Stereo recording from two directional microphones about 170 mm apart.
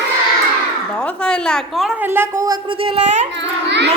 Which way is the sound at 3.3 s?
90° right.